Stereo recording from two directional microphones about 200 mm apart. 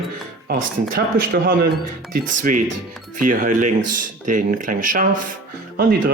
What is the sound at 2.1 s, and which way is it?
Speech, 40° right (ahead or behind).